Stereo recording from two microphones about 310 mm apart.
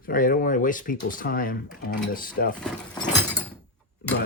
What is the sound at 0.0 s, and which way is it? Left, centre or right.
Speech, left.